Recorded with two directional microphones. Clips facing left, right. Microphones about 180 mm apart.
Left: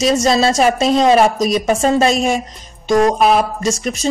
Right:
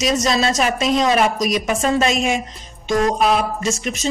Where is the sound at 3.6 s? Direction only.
35° left (ahead or behind).